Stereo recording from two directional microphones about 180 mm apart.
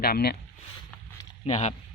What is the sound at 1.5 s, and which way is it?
Speech, 40° left (ahead or behind).